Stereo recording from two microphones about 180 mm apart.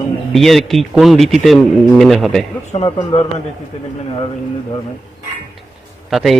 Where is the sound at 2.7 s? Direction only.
35° left (ahead or behind).